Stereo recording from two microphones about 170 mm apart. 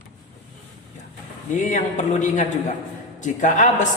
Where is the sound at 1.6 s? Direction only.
45° left (ahead or behind).